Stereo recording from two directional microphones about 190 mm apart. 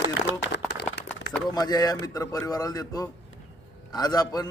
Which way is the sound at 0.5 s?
60° left (ahead or behind).